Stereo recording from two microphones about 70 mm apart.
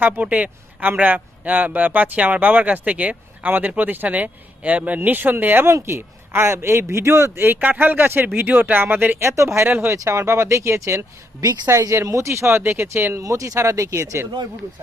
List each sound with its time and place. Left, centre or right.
0.0 s a man's voice: right
9.2 s speech: right
9.6 s speech: right
9.9 s speech: right
11.7 s speech: right
13.2 s speech: right